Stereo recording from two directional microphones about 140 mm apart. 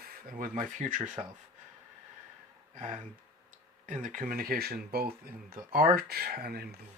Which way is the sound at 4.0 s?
75° right (ahead or behind).